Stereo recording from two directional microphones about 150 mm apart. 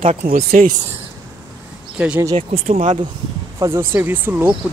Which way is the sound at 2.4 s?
45° right (ahead or behind).